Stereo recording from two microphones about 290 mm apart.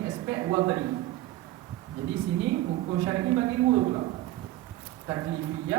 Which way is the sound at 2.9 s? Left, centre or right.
Centre.